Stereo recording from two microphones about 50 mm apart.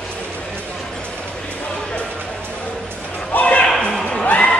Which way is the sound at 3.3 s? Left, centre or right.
Left.